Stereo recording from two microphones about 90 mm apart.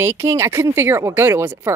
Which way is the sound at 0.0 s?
30° right (ahead or behind).